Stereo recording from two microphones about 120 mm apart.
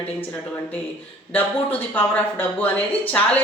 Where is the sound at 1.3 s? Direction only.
15° left (ahead or behind).